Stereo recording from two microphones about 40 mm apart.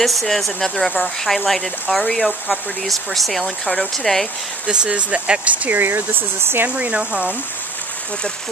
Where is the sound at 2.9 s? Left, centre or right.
Centre.